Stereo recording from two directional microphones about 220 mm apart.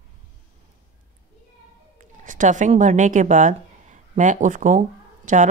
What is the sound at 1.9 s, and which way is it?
Speech, 35° right (ahead or behind).